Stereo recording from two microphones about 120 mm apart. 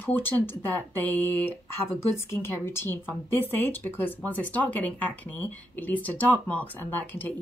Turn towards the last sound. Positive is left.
turn(degrees=15)  # may be behind; listen again after turning